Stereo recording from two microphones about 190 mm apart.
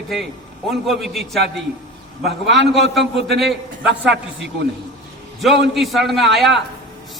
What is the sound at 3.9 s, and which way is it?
Speech, 65° right (ahead or behind).